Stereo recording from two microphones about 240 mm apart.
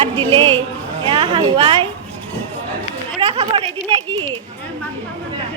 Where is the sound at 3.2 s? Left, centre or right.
Right.